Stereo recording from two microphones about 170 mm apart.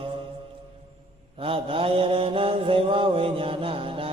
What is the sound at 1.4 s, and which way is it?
Mantra, 35° right (ahead or behind).